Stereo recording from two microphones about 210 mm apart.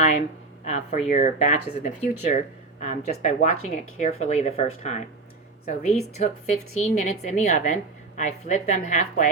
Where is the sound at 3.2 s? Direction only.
35° left (ahead or behind).